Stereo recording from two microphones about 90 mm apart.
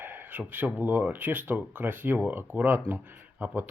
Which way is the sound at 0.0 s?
20° right (ahead or behind).